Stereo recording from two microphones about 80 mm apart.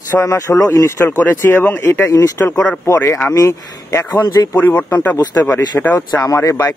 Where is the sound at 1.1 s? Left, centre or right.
Left.